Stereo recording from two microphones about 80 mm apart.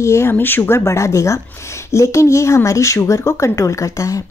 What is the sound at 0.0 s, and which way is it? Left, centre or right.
A woman's voice, left.